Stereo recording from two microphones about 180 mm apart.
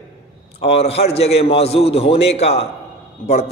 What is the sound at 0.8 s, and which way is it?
A man's voice, 35° left (ahead or behind).